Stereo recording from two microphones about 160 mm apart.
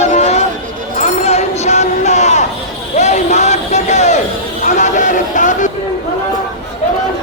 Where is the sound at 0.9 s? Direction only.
45° left (ahead or behind).